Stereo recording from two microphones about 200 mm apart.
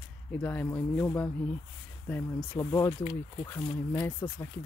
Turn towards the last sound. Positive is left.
turn(degrees=10)  # may be behind; listen again after turning